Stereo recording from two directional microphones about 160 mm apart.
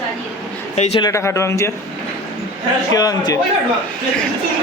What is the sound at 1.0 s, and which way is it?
Speech, 20° left (ahead or behind).